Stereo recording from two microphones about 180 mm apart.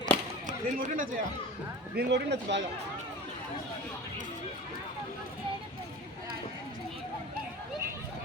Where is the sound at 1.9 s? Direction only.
75° right (ahead or behind).